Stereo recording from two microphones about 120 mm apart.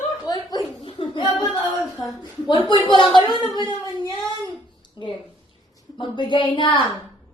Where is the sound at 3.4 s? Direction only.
35° left (ahead or behind).